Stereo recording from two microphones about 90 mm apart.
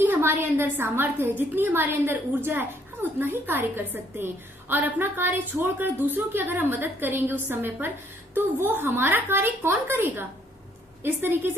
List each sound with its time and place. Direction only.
0.0 s a woman's voice: 25° right (ahead or behind)